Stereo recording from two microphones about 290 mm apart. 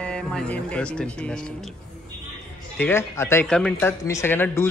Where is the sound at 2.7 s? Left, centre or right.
Centre.